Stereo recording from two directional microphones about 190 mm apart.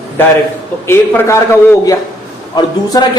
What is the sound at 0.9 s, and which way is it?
A man's voice, 10° left (ahead or behind).